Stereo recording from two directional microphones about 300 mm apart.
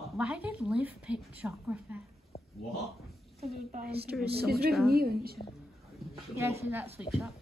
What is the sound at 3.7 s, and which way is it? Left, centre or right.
A woman's voice, right.